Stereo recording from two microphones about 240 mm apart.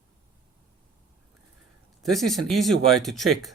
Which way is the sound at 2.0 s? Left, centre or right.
Centre.